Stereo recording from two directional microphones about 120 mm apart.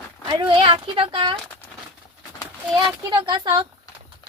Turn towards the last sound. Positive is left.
turn(degrees=-35)  # may be behind; listen again after turning